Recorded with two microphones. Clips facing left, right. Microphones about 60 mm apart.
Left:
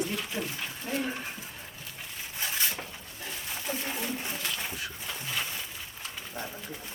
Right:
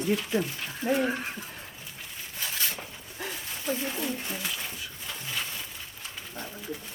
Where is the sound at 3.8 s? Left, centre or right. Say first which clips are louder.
Right 2 dB; centre.